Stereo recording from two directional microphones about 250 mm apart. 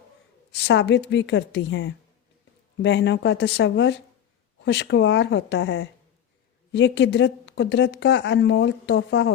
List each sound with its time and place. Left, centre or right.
0.5 s speech: left